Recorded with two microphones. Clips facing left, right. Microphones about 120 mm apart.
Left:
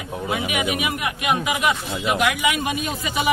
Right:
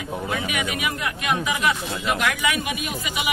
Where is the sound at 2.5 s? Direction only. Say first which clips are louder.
Left 3 dB; 30° left (ahead or behind).